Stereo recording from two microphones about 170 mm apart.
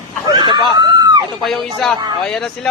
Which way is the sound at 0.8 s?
25° right (ahead or behind).